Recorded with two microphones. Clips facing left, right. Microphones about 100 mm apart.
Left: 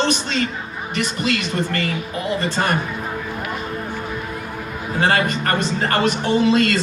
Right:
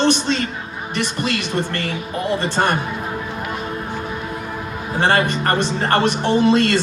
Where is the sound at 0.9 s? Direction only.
30° right (ahead or behind).